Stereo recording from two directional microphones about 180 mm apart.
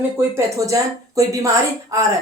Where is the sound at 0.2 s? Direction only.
15° right (ahead or behind).